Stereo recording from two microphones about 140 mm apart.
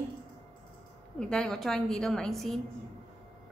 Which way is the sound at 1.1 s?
5° left (ahead or behind).